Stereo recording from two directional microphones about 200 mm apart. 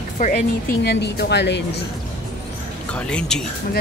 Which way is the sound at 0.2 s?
50° left (ahead or behind).